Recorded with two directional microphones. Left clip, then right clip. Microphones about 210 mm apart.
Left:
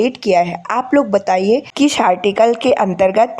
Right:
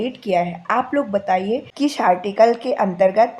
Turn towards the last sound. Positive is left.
turn(degrees=35)  # may be behind; listen again after turning